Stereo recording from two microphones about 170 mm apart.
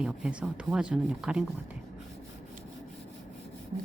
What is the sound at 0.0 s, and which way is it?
Speech, 5° right (ahead or behind).